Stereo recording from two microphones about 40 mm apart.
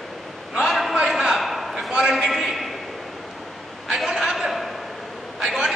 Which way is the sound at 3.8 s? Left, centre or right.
Centre.